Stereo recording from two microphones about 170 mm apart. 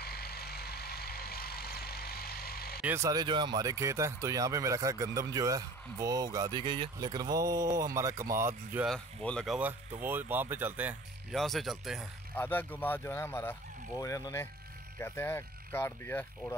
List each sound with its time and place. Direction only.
0.0 s vehicle: 65° left (ahead or behind)
2.8 s speech: 15° right (ahead or behind)
8.8 s speech: 5° left (ahead or behind)
9.6 s speech: 10° right (ahead or behind)
11.3 s speech: centre (ahead or behind)
12.4 s speech: 10° left (ahead or behind)